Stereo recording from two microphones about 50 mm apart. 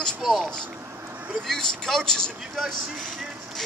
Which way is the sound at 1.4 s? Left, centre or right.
Centre.